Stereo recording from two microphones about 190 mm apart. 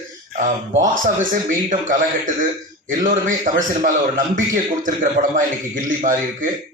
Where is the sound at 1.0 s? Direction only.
45° right (ahead or behind).